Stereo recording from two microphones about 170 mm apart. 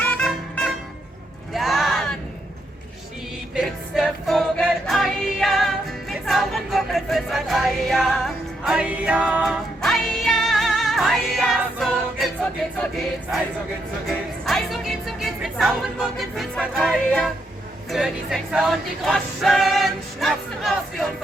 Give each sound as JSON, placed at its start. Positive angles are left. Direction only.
{"t": 0.0, "sound": "music", "side_deg": 5}
{"t": 1.5, "sound": "a sound", "side_deg": 0}
{"t": 3.5, "sound": "music", "side_deg": 0}
{"t": 14.1, "sound": "speech", "side_deg": 0}
{"t": 17.9, "sound": "music", "side_deg": 0}